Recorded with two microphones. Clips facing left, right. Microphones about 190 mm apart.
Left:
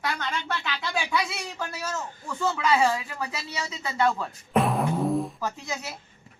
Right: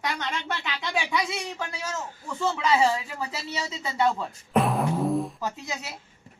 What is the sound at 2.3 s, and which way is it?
Speech, 25° right (ahead or behind).